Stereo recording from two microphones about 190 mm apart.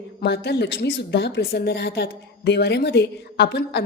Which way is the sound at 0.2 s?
60° left (ahead or behind).